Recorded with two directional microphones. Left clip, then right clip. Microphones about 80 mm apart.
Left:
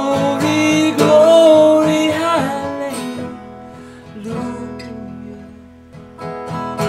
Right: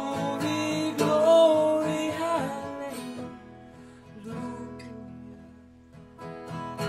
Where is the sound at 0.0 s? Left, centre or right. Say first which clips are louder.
Left 14 dB; left.